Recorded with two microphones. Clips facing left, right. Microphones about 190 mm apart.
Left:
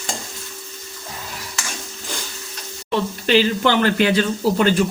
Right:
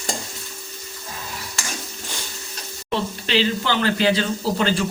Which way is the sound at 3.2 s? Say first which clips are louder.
Left 7 dB; 50° left (ahead or behind).